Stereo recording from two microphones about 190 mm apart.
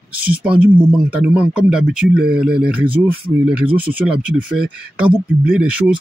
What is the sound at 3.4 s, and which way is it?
Speech, 5° right (ahead or behind).